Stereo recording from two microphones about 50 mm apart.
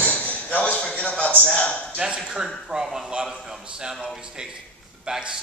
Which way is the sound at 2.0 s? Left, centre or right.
Centre.